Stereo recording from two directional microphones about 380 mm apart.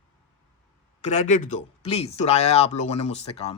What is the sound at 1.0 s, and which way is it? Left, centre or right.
Speech, centre.